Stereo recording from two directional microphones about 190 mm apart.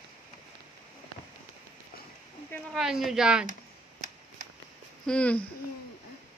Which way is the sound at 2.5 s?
Centre (ahead or behind).